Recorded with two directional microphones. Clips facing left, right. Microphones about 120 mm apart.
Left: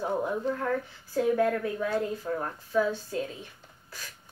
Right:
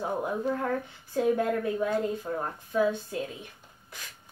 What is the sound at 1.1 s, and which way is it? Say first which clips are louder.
Speech: left 1 dB; 20° right (ahead or behind).